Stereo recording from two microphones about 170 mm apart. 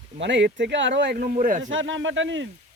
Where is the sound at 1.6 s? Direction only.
90° right.